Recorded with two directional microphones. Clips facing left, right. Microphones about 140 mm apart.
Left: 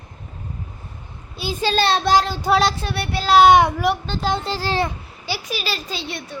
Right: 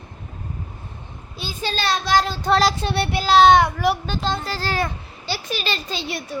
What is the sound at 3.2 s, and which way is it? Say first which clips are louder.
A child's voice: left 1 dB; 5° left (ahead or behind).